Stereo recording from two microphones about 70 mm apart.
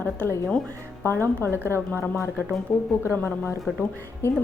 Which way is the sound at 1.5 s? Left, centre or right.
Right.